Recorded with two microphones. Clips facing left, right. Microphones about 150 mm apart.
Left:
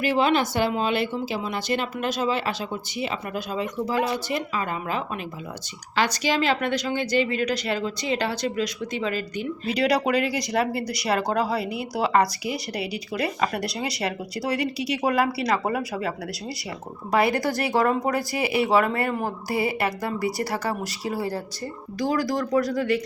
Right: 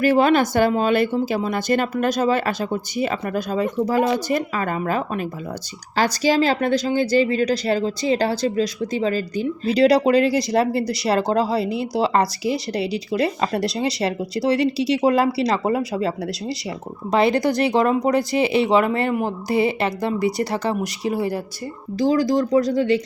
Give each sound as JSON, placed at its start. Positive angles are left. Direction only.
{"t": 0.0, "sound": "speech", "side_deg": -45}
{"t": 6.2, "sound": "speech", "side_deg": -35}